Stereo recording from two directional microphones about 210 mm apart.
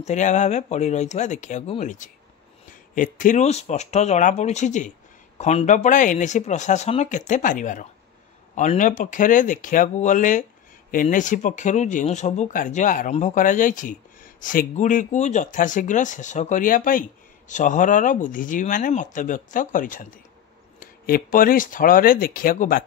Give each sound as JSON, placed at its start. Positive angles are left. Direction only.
{"t": 0.0, "sound": "speech", "side_deg": 35}